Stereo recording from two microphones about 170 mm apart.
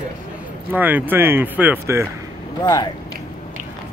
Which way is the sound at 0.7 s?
10° right (ahead or behind).